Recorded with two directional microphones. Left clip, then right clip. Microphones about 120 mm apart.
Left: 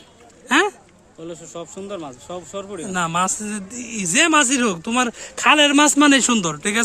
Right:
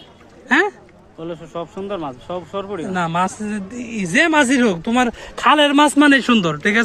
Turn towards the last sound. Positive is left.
turn(degrees=20)  # may be behind; listen again after turning